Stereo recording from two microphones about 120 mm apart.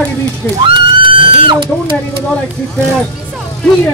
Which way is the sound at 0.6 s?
45° right (ahead or behind).